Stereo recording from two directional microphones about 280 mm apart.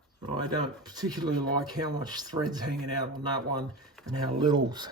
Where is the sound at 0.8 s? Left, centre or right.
Centre.